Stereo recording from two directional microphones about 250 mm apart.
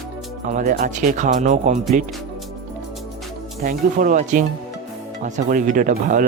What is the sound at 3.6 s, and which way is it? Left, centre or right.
A man's voice, right.